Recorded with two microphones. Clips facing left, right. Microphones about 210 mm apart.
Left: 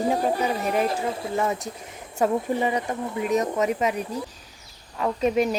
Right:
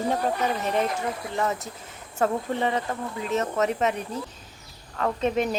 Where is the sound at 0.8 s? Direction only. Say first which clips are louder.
Left 3 dB; 25° left (ahead or behind).